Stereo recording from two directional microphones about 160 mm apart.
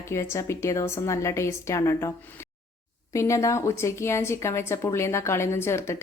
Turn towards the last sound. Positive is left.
turn(degrees=15)  # may be behind; listen again after turning